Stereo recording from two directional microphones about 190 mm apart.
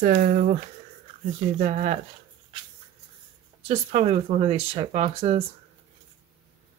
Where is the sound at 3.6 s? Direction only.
35° right (ahead or behind).